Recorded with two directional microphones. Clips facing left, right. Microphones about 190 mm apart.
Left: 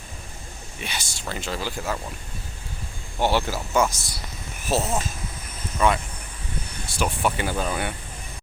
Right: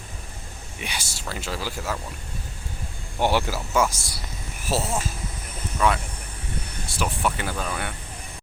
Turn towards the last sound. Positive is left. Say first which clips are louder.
# left 3 dB
turn(degrees=30)  # may be behind; listen again after turning